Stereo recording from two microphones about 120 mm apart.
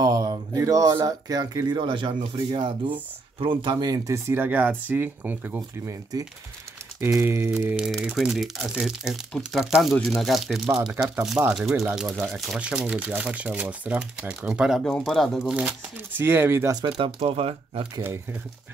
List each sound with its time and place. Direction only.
0.0 s speech: 35° right (ahead or behind)
3.9 s speech: 25° right (ahead or behind)
7.2 s speech: 20° right (ahead or behind)
7.7 s speech: 5° right (ahead or behind)
10.9 s speech: 15° right (ahead or behind)
14.9 s speech: 5° left (ahead or behind)
15.5 s speech: 15° right (ahead or behind)
16.8 s speech: 40° right (ahead or behind)
17.2 s speech: 55° right (ahead or behind)